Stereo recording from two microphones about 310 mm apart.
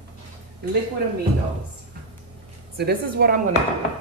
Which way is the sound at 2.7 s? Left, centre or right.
Right.